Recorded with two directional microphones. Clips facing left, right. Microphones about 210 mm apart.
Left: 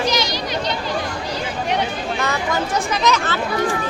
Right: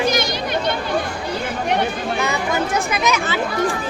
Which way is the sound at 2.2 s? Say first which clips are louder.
Right 1 dB; 10° right (ahead or behind).